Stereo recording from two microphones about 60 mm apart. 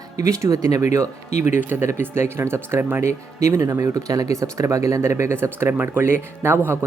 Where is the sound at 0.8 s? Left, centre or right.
Right.